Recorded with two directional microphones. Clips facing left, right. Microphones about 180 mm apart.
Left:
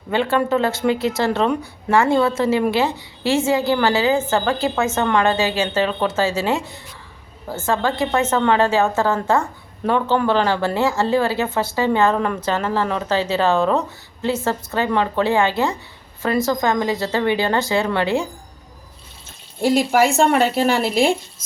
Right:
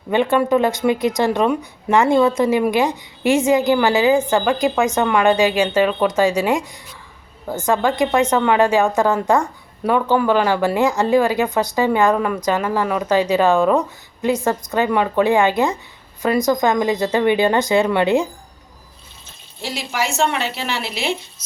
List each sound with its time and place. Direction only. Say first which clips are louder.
0.1 s speech: right 3 dB; 15° right (ahead or behind)
19.6 s speech: left 9 dB; 50° left (ahead or behind)